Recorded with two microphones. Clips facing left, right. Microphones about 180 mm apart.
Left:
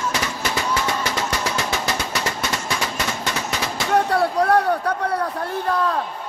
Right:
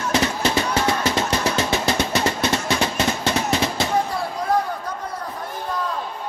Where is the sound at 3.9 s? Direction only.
70° left (ahead or behind).